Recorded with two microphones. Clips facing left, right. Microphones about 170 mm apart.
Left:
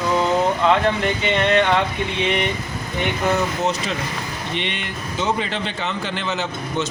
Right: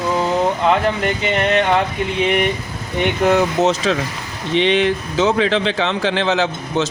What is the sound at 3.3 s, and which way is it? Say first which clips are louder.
Speech: right 6 dB; 90° right.